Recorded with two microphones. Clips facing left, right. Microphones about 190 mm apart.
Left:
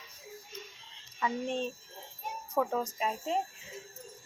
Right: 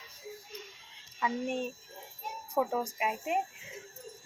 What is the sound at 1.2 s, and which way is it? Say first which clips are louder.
A child's voice: even; 10° right (ahead or behind).